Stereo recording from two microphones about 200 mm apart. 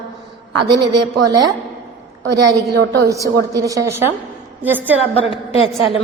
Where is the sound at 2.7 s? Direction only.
55° right (ahead or behind).